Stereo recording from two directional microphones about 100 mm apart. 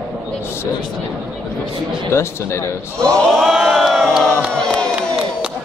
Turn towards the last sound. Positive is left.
turn(degrees=5)  # may be behind; listen again after turning